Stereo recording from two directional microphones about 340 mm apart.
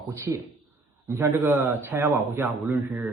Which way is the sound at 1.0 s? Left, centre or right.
Centre.